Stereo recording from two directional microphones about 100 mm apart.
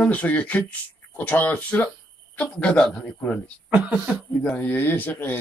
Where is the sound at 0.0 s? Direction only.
15° left (ahead or behind).